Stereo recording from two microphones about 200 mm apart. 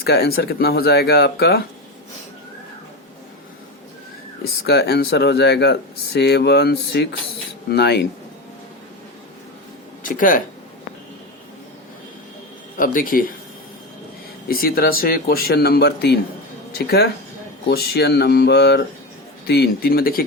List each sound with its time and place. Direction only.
0.0 s speech: 50° left (ahead or behind)
4.6 s speech: 55° left (ahead or behind)
10.0 s speech: 40° left (ahead or behind)
12.7 s speech: 45° left (ahead or behind)
14.4 s speech: 50° left (ahead or behind)